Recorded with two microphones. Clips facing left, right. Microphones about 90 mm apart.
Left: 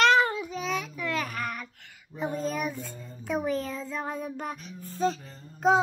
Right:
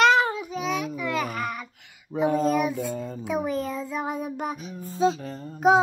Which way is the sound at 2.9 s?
80° right.